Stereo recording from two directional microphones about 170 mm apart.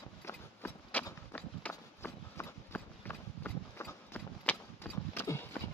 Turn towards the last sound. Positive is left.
turn(degrees=10)  # may be behind; listen again after turning